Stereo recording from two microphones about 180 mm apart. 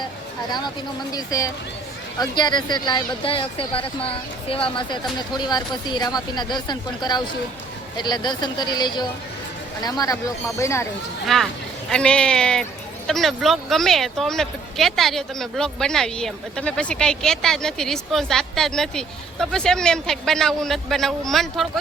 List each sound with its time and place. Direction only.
1.1 s speech: 20° left (ahead or behind)
11.3 s speech: centre (ahead or behind)